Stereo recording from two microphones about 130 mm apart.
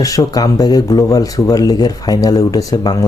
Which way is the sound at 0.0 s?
25° left (ahead or behind).